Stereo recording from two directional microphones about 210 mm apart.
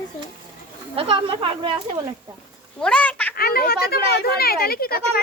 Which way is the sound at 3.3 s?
45° left (ahead or behind).